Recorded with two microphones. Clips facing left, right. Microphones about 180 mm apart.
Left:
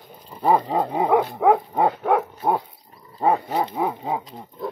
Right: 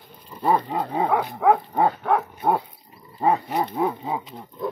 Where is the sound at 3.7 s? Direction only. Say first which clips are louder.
Even; 15° left (ahead or behind).